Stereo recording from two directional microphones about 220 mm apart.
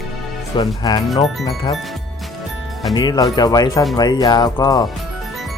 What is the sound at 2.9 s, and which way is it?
Speech, 20° left (ahead or behind).